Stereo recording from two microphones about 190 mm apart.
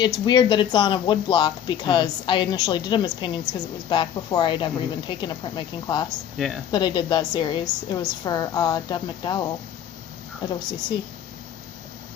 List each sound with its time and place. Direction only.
0.3 s speech: 25° left (ahead or behind)
6.1 s speech: centre (ahead or behind)
6.7 s speech: 25° left (ahead or behind)